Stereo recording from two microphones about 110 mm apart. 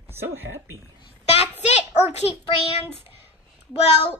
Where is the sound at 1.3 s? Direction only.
80° left.